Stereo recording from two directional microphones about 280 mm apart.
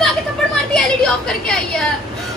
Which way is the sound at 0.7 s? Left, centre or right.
Centre.